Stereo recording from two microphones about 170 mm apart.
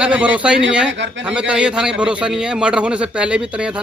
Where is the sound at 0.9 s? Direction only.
90° right.